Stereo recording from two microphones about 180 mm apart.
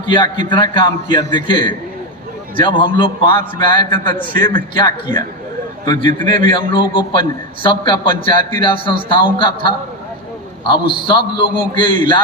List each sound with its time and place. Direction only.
0.0 s a man's voice: 25° left (ahead or behind)
5.8 s a man's voice: 20° left (ahead or behind)
6.1 s a man's voice: 50° right (ahead or behind)
6.3 s a man's voice: 30° left (ahead or behind)